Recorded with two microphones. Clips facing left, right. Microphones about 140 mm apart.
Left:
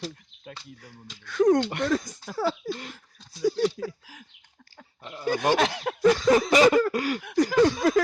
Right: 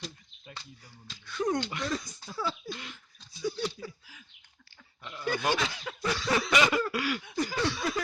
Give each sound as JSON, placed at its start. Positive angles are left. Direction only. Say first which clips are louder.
{"t": 1.2, "sound": "speech", "louder": "left 10 dB", "side_deg": 90}
{"t": 1.7, "sound": "speech", "louder": "left 8 dB", "side_deg": 60}
{"t": 2.7, "sound": "speech", "louder": "left 5 dB", "side_deg": 40}
{"t": 3.3, "sound": "speech", "louder": "left 9 dB", "side_deg": 90}
{"t": 5.0, "sound": "speech", "louder": "left 6 dB", "side_deg": 35}
{"t": 5.5, "sound": "speech", "louder": "left 9 dB", "side_deg": 70}
{"t": 6.1, "sound": "a sound", "louder": "left 10 dB", "side_deg": 45}
{"t": 6.9, "sound": "speech", "louder": "left 4 dB", "side_deg": 40}
{"t": 7.2, "sound": "a sound", "louder": "left 10 dB", "side_deg": 85}
{"t": 7.6, "sound": "speech", "louder": "left 12 dB", "side_deg": 45}